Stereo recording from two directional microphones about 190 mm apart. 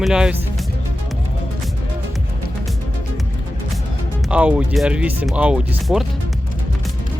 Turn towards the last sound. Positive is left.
turn(degrees=-5)  # may be behind; listen again after turning